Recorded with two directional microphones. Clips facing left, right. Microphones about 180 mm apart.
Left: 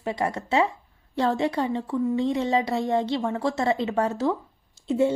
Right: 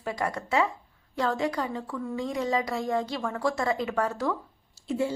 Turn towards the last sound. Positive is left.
turn(degrees=25)  # may be behind; listen again after turning